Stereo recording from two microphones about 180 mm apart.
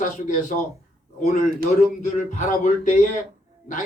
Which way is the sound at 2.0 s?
45° left (ahead or behind).